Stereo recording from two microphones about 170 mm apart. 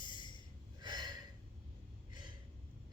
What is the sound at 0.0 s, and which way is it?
Gasp, 25° left (ahead or behind).